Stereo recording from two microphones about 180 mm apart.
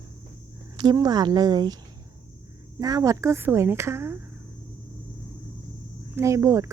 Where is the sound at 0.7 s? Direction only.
20° right (ahead or behind).